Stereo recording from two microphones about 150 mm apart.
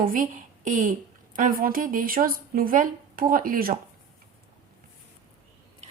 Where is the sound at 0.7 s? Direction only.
60° right (ahead or behind).